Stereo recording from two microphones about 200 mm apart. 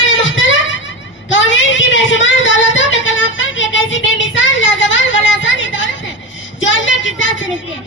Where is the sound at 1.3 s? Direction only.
70° left (ahead or behind).